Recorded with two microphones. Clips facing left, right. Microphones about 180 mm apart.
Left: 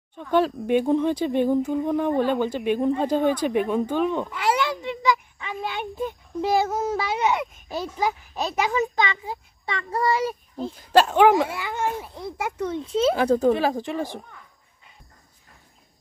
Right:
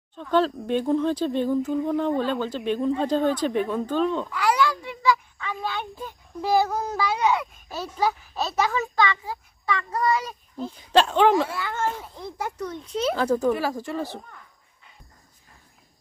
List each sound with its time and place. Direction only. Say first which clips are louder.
0.1 s speech: left 1 dB; 10° left (ahead or behind); by 10.7 s 30° left (ahead or behind)
10.8 s speech: left 2 dB; 5° left (ahead or behind)
12.8 s speech: left 3 dB; 25° left (ahead or behind)